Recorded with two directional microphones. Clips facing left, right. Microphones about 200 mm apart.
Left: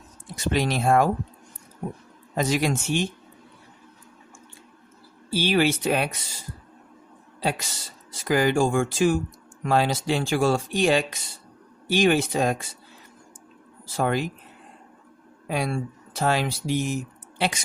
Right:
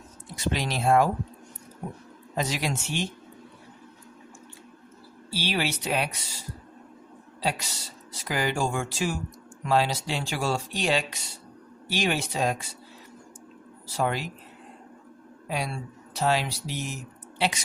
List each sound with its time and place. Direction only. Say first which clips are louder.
0.3 s speech: left 5 dB; 50° left (ahead or behind)
2.3 s speech: left 6 dB; 50° left (ahead or behind)
5.3 s speech: left 7 dB; 50° left (ahead or behind)
7.4 s speech: left 2 dB; 50° left (ahead or behind)
13.9 s speech: left 4 dB; 50° left (ahead or behind)
15.4 s speech: left 5 dB; 50° left (ahead or behind)